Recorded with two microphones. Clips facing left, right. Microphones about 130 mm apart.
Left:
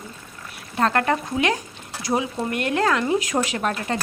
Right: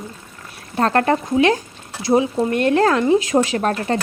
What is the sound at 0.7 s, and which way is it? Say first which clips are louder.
Speech: right 4 dB; 35° right (ahead or behind).